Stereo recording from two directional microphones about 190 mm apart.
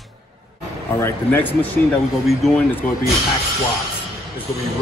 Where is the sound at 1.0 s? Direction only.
10° left (ahead or behind).